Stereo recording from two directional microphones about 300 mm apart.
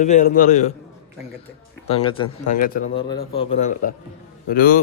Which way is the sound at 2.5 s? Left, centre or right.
Left.